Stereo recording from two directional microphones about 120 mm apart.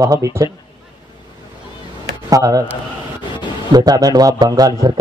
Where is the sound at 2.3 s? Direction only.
30° right (ahead or behind).